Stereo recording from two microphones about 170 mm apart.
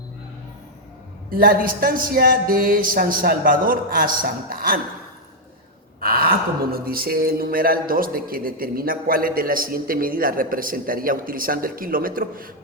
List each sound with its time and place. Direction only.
1.3 s speech: 55° right (ahead or behind)
6.0 s speech: 60° right (ahead or behind)